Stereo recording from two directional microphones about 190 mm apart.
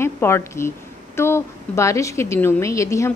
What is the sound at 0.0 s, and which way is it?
A woman's voice, 15° left (ahead or behind).